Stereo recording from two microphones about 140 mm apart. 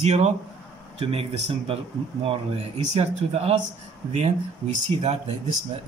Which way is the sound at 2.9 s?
50° right (ahead or behind).